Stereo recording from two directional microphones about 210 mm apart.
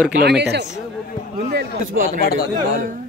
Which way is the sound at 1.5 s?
40° right (ahead or behind).